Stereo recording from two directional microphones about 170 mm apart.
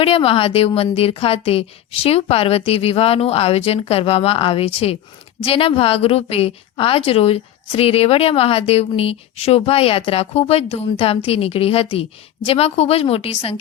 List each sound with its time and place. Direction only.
0.0 s a woman's voice: 35° left (ahead or behind)